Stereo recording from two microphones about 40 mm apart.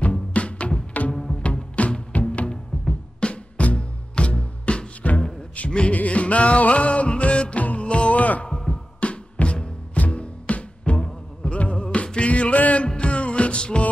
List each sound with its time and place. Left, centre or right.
0.0 s music: left
1.1 s music: centre
1.4 s music: left
8.5 s music: left
12.8 s music: left